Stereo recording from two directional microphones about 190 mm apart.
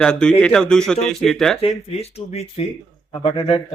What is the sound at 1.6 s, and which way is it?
Speech, 30° left (ahead or behind).